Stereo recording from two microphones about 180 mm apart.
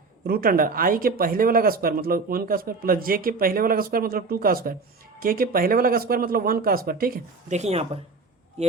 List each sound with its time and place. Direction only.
0.3 s speech: 55° right (ahead or behind); by 8.7 s 35° right (ahead or behind)